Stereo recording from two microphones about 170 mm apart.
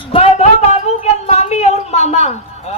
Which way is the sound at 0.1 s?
35° left (ahead or behind).